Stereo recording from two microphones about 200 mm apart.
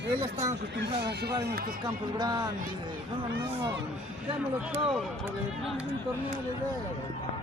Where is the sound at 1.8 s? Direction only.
20° right (ahead or behind).